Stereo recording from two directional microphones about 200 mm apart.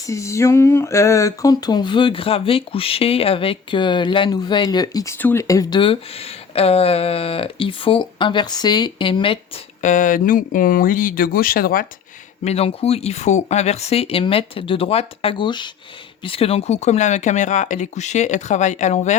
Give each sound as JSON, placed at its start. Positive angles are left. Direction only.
{"t": 0.0, "sound": "speech", "side_deg": 15}
{"t": 9.8, "sound": "speech", "side_deg": 40}
{"t": 12.5, "sound": "speech", "side_deg": 30}